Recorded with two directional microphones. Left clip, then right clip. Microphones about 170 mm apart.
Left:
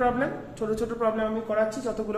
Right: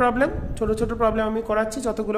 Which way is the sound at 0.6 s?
55° right (ahead or behind).